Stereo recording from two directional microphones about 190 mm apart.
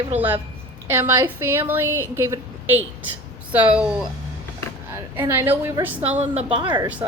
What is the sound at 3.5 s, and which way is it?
Speech, 5° right (ahead or behind).